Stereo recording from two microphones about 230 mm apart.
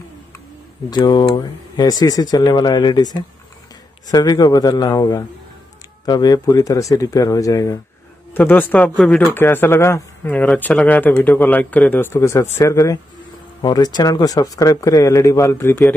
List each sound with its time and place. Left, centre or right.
0.8 s speech: centre